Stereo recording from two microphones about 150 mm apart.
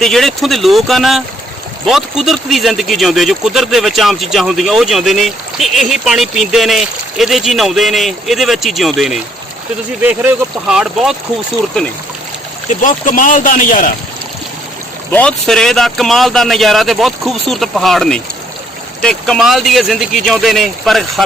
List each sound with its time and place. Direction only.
0.0 s speech: centre (ahead or behind)
10.0 s speech: 10° right (ahead or behind)
12.8 s speech: 60° left (ahead or behind)
15.1 s speech: 5° left (ahead or behind)